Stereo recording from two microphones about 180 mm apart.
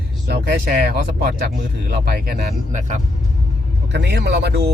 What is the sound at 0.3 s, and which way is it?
Speech, 65° right (ahead or behind).